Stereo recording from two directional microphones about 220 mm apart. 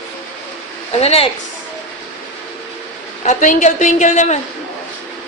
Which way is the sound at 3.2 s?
35° left (ahead or behind).